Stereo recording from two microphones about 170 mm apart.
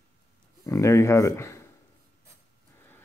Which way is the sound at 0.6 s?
20° left (ahead or behind).